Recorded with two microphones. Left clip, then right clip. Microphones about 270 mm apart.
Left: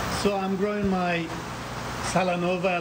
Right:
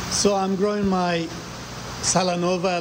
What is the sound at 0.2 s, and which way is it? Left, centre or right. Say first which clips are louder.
Speech: right 7 dB; centre.